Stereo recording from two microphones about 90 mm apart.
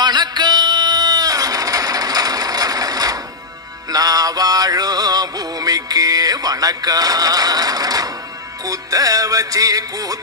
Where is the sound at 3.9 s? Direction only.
45° right (ahead or behind).